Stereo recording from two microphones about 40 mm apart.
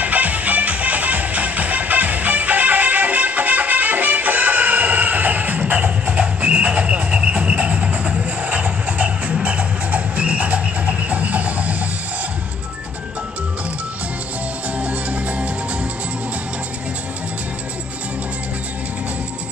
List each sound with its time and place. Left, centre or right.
0.0 s music: right
14.8 s music: right